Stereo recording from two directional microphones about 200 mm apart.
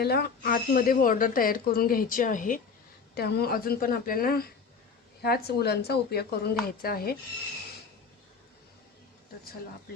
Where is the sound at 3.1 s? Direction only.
50° left (ahead or behind).